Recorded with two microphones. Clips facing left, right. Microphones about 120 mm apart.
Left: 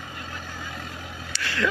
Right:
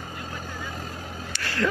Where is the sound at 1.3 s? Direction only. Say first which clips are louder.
Even; 45° right (ahead or behind).